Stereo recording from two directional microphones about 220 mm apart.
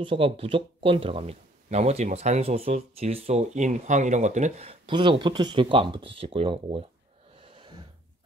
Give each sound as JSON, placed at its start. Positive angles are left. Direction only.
{"t": 0.0, "sound": "speech", "side_deg": -25}
{"t": 7.5, "sound": "gasp", "side_deg": -20}